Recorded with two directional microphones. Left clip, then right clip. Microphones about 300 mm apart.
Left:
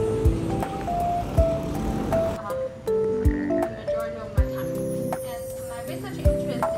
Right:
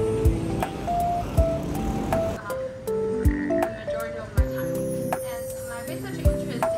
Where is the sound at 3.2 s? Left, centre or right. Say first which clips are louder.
Even; centre.